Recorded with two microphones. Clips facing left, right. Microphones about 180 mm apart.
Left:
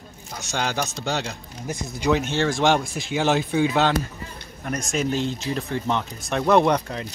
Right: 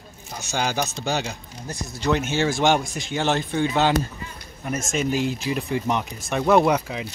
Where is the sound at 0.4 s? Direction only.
5° right (ahead or behind).